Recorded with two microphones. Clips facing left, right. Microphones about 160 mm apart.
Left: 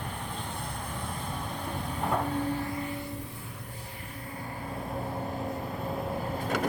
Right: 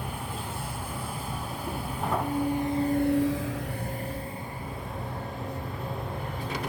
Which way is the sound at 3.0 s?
80° right.